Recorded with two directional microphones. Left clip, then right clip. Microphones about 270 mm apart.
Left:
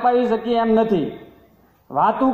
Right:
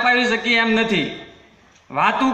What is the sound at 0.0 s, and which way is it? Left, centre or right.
A man's voice, right.